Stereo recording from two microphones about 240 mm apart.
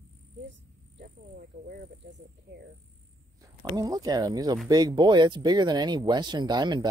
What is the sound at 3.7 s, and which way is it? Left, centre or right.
Speech, centre.